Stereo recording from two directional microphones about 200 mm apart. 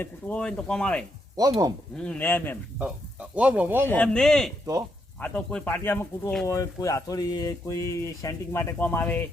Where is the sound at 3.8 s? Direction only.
5° left (ahead or behind).